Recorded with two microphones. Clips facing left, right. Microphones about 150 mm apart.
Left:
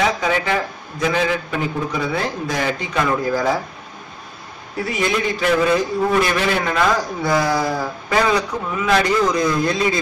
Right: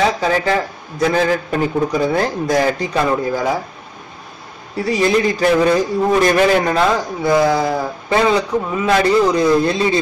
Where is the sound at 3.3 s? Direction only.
15° right (ahead or behind).